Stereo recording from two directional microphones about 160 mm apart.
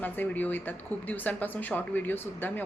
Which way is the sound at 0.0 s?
10° left (ahead or behind).